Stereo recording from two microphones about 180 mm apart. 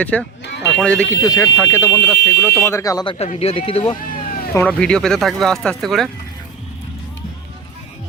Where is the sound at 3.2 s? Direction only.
35° left (ahead or behind).